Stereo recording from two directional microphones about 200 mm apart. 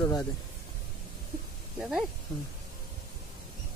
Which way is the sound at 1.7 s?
5° right (ahead or behind).